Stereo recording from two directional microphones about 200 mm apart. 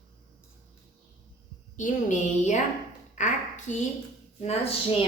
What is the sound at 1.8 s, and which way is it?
Speech, 35° left (ahead or behind).